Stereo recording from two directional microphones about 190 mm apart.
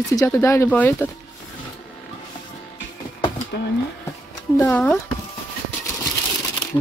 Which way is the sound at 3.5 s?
60° left (ahead or behind).